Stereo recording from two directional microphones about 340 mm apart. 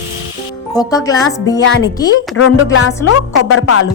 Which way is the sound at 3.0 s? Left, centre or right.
Left.